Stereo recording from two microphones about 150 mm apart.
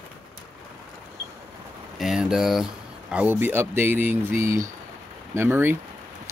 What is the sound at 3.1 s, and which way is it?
Speech, 15° right (ahead or behind).